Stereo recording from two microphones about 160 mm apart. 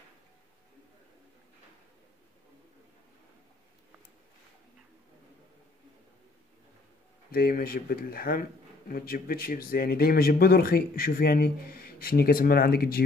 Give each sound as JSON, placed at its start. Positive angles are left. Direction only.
{"t": 7.2, "sound": "speech", "side_deg": 70}